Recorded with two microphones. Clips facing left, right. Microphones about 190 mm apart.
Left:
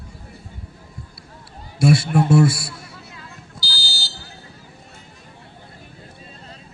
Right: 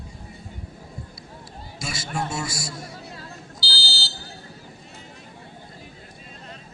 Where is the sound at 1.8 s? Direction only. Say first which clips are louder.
Left 13 dB; 60° left (ahead or behind).